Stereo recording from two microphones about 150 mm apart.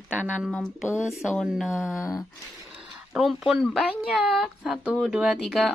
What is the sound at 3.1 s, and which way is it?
A woman's voice, centre (ahead or behind).